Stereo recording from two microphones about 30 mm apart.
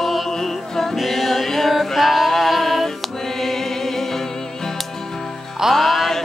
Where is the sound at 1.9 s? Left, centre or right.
Centre.